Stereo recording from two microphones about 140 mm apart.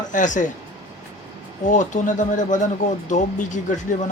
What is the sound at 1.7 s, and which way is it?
Speech, 65° left (ahead or behind).